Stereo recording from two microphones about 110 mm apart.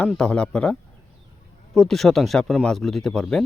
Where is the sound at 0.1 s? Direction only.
10° left (ahead or behind).